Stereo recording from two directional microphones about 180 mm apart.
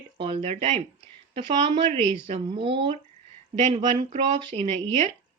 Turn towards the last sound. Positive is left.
turn(degrees=-35)  # may be behind; listen again after turning